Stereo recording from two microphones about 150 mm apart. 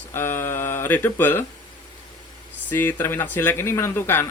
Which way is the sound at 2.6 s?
15° left (ahead or behind).